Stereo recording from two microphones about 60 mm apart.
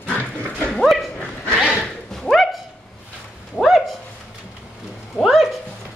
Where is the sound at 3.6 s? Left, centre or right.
Centre.